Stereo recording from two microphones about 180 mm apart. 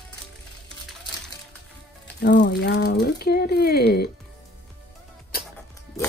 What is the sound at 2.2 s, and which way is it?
Speech, 70° left (ahead or behind).